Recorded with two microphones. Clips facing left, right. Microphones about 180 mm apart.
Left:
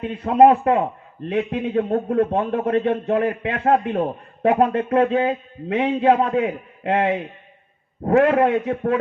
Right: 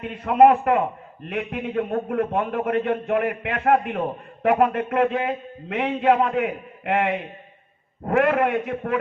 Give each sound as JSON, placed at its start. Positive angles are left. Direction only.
{"t": 0.0, "sound": "a man's voice", "side_deg": 30}